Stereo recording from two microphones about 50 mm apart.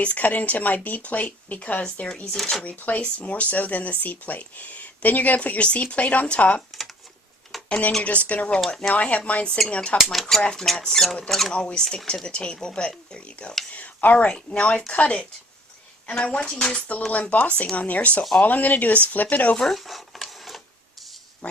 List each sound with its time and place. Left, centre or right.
0.0 s speech: left
2.3 s speech: centre
2.6 s speech: left
7.5 s a sound: centre
8.0 s a woman's voice: left
8.6 s speech: centre
8.9 s a woman's voice: left
10.0 s speech: centre
10.4 s speech: centre
11.5 s a woman's voice: centre
13.7 s a woman's voice: left
19.5 s a sound: centre
21.4 s speech: left